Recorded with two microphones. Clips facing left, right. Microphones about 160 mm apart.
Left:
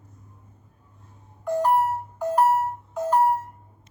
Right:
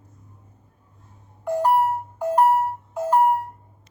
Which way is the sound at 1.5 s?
10° right (ahead or behind).